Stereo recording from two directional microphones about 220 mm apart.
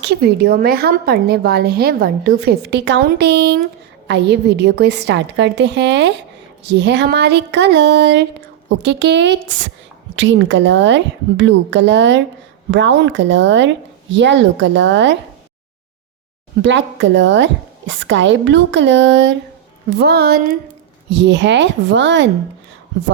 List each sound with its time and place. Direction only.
0.0 s a woman's voice: 50° right (ahead or behind)
16.6 s a woman's voice: 55° right (ahead or behind)